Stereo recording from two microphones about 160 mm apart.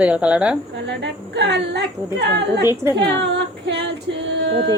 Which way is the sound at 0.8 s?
90° right.